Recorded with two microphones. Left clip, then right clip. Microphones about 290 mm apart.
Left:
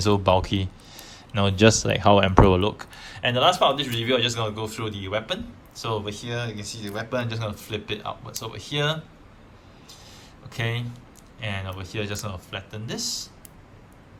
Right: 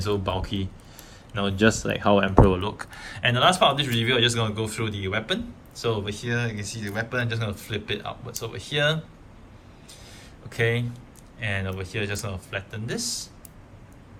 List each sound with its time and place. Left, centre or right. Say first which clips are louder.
0.0 s speech: left 7 dB; centre
2.0 s speech: left 3 dB; right
2.6 s speech: left 5 dB; centre
10.5 s speech: right 5 dB; centre